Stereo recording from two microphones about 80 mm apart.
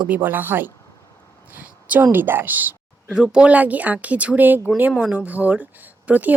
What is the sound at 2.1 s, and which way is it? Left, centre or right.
Speech, right.